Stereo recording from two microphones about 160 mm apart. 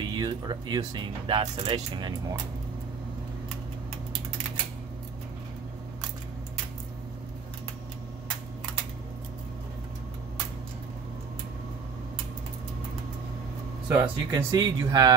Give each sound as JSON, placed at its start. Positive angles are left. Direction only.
{"t": 0.0, "sound": "speech", "side_deg": -30}
{"t": 13.8, "sound": "speech", "side_deg": -10}